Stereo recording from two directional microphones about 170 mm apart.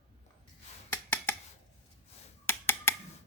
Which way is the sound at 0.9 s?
10° left (ahead or behind).